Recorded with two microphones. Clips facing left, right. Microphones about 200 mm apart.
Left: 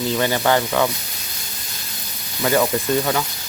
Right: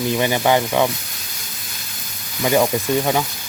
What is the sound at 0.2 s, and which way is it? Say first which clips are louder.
Speech: right 1 dB; 15° right (ahead or behind).